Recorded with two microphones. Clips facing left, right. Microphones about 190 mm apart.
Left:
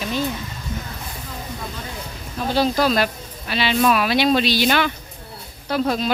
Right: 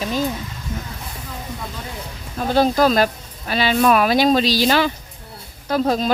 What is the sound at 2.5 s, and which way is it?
Speech, 50° right (ahead or behind).